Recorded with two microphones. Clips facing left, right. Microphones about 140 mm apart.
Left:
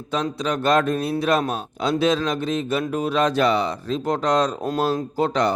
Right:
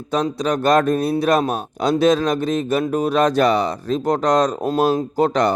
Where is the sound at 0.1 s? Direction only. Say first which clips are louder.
Right 4 dB; 40° right (ahead or behind).